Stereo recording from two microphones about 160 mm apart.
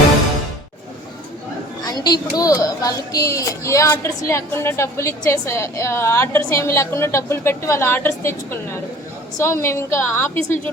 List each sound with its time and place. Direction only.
1.8 s a child's voice: 25° left (ahead or behind)